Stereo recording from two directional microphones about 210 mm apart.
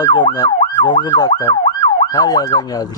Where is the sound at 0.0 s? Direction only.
20° left (ahead or behind).